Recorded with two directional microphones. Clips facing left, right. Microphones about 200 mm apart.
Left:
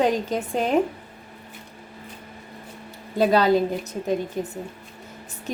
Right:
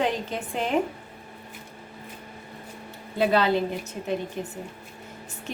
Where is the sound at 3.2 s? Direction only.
40° left (ahead or behind).